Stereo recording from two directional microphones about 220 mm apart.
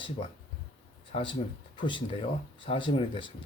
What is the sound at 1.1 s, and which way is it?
Speech, 25° left (ahead or behind).